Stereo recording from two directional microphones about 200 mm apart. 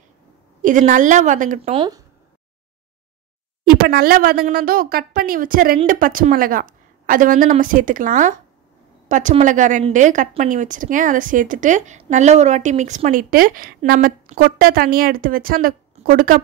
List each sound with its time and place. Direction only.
0.6 s a woman's voice: 40° right (ahead or behind); by 2.0 s 20° right (ahead or behind)
3.6 s a woman's voice: 50° right (ahead or behind)